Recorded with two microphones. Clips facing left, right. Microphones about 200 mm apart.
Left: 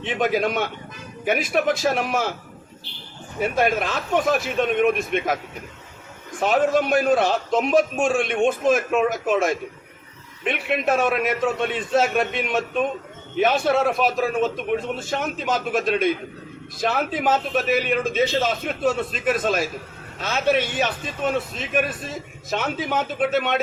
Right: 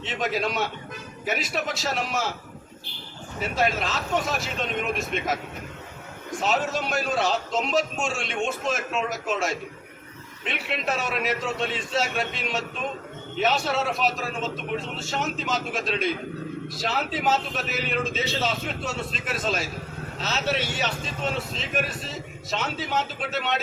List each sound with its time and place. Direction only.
0.0 s speech: 55° left (ahead or behind)
3.4 s speech: 55° left (ahead or behind)
6.4 s speech: 50° left (ahead or behind)